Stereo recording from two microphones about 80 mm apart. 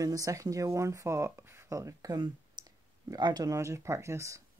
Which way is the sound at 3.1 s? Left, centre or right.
Right.